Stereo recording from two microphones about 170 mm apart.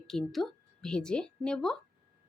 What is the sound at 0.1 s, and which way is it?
Speech, centre (ahead or behind).